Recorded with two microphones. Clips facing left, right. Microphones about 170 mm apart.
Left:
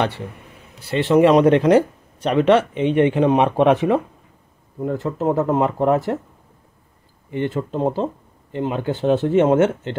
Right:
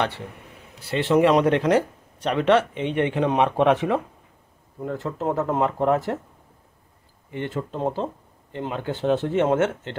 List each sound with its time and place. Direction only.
0.9 s speech: 25° left (ahead or behind)
7.3 s speech: 20° left (ahead or behind)